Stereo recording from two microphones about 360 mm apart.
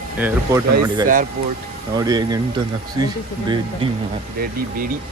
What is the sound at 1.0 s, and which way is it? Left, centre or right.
Speech, right.